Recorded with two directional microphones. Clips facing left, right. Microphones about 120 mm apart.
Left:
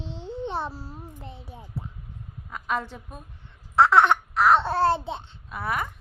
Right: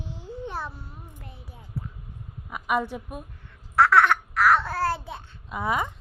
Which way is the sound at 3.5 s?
20° left (ahead or behind).